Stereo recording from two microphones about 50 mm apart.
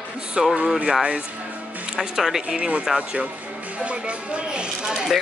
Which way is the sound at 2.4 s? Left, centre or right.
Centre.